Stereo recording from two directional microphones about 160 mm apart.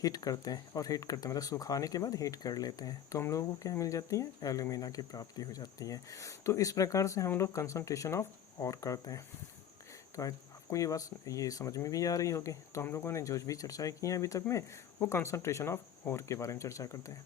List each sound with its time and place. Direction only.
0.0 s speech: 25° left (ahead or behind)